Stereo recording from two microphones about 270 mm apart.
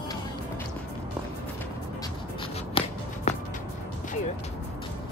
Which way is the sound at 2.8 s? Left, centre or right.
Centre.